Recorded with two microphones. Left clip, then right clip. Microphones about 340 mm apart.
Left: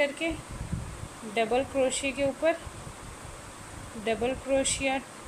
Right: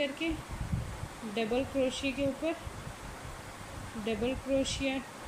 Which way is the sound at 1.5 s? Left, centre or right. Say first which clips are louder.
Left 4 dB; left.